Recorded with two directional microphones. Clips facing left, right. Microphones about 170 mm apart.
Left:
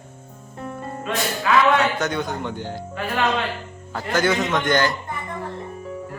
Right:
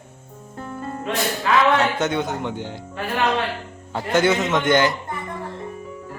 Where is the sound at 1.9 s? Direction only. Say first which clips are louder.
Right 2 dB; 25° right (ahead or behind).